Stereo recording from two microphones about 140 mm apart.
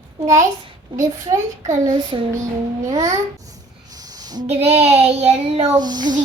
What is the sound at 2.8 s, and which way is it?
Speech, 25° right (ahead or behind).